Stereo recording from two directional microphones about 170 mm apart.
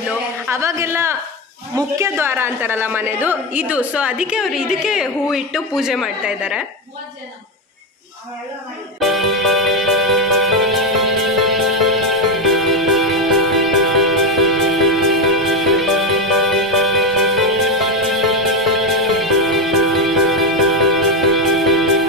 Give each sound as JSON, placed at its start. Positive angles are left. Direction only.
{"t": 0.5, "sound": "a woman's voice", "side_deg": -15}
{"t": 9.0, "sound": "music", "side_deg": 0}